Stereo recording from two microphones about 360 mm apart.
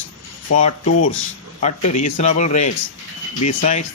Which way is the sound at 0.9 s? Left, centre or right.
Left.